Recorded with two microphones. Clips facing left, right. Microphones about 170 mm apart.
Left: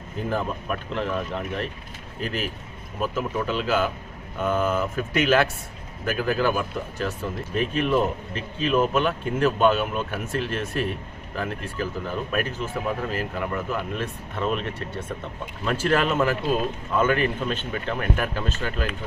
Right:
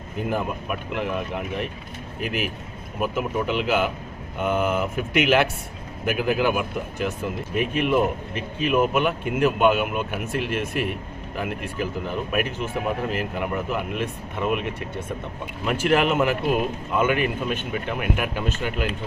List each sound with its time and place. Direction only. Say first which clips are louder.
0.3 s speech: even; 10° right (ahead or behind)